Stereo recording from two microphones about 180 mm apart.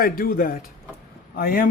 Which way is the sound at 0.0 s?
55° left (ahead or behind).